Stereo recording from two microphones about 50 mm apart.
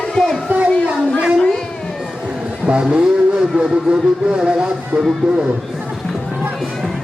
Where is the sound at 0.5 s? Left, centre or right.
Right.